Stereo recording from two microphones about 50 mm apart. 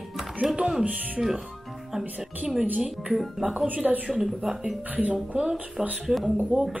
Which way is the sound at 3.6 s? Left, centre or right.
Right.